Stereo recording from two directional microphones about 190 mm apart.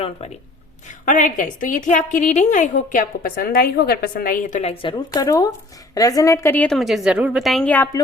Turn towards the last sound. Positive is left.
turn(degrees=10)  # may be behind; listen again after turning